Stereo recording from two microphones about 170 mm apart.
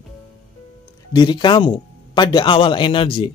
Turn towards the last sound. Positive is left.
turn(degrees=30)  # may be behind; listen again after turning